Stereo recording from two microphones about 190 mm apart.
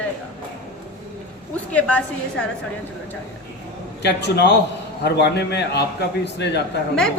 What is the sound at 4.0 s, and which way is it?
A man's voice, 65° left (ahead or behind).